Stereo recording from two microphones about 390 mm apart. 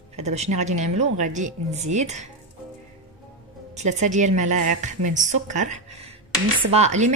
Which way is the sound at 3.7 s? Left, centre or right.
Centre.